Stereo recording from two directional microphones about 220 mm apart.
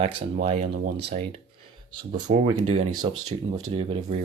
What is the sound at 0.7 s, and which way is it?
Speech, 40° right (ahead or behind).